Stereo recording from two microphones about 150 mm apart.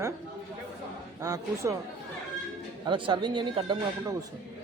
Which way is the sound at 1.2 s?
20° right (ahead or behind).